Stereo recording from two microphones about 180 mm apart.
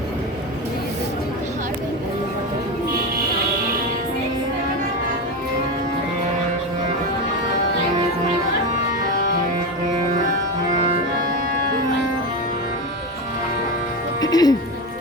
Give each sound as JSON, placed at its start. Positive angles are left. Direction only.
{"t": 14.2, "sound": "music", "side_deg": 20}